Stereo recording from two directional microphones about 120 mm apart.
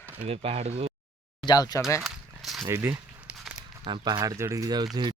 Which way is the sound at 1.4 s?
35° left (ahead or behind).